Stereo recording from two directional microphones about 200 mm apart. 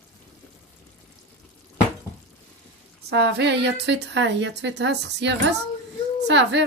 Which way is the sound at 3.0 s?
60° right (ahead or behind).